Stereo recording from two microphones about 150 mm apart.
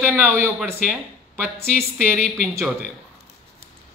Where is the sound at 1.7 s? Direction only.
10° left (ahead or behind).